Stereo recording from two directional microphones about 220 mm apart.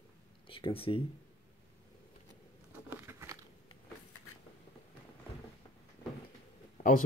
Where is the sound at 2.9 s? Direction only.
10° right (ahead or behind).